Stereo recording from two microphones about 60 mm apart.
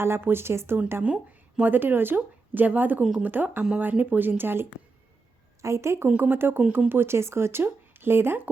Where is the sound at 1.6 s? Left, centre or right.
Right.